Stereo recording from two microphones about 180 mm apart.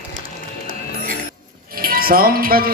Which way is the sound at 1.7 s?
55° right (ahead or behind).